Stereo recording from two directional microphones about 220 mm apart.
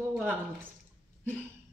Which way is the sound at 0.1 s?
10° right (ahead or behind).